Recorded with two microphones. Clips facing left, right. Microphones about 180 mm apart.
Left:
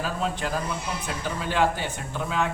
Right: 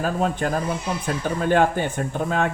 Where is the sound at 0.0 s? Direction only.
50° right (ahead or behind).